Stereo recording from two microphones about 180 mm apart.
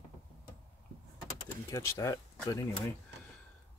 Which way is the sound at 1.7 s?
15° left (ahead or behind).